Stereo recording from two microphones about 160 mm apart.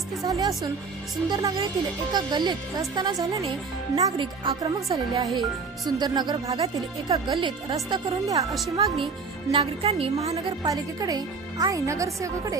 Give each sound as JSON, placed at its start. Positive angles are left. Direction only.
{"t": 0.2, "sound": "speech", "side_deg": -20}
{"t": 9.5, "sound": "a woman's voice", "side_deg": -40}
{"t": 10.7, "sound": "speech", "side_deg": -20}